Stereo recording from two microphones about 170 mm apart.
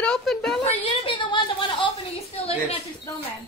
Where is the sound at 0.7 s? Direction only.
30° left (ahead or behind).